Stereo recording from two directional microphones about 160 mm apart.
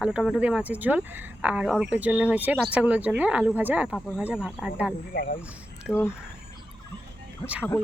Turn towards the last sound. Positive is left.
turn(degrees=-10)  # may be behind; listen again after turning